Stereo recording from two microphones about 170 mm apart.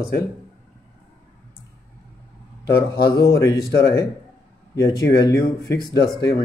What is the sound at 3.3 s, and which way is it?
Speech, 20° left (ahead or behind).